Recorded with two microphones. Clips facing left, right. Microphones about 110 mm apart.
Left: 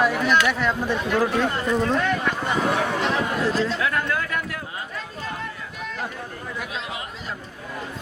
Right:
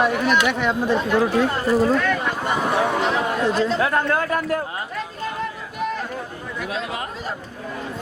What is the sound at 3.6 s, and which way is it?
Speech, 40° right (ahead or behind).